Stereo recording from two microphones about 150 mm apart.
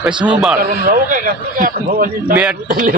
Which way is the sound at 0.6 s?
75° right (ahead or behind).